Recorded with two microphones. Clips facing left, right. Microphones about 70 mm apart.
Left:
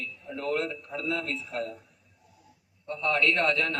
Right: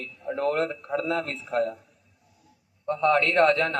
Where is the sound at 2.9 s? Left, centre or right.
Right.